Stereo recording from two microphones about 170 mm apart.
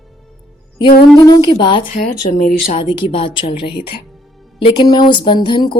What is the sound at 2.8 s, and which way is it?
A woman's voice, 30° left (ahead or behind).